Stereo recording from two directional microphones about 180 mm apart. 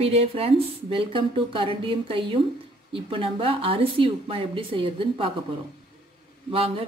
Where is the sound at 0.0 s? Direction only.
35° right (ahead or behind).